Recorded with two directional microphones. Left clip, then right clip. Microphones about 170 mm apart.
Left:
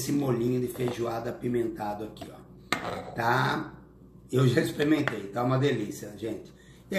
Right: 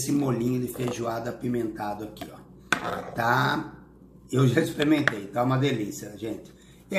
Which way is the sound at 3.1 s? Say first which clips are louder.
Right 2 dB; 15° right (ahead or behind).